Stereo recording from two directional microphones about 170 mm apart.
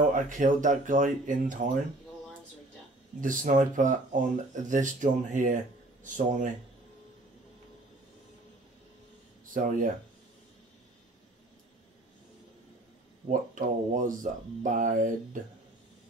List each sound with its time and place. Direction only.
0.0 s speech: 50° right (ahead or behind)
3.2 s speech: 50° right (ahead or behind)
9.5 s speech: 50° right (ahead or behind)
13.3 s speech: 50° right (ahead or behind)